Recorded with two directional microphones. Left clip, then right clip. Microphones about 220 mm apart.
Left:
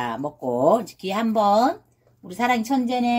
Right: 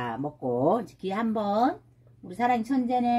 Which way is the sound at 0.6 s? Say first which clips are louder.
Left 8 dB; 15° right (ahead or behind).